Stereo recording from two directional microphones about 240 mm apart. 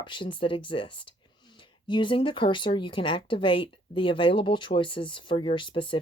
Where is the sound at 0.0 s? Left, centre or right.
Left.